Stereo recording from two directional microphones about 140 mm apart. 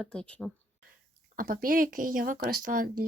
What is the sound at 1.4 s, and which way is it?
Speech, 90° right.